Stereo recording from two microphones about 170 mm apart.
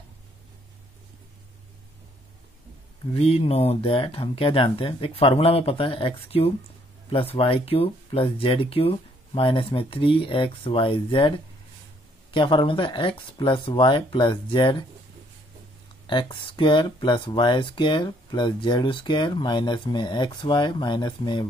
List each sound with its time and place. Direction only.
3.2 s speech: 35° left (ahead or behind)
16.1 s speech: 25° left (ahead or behind)